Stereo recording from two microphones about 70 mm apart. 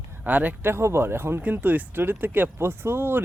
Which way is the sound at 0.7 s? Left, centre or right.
Right.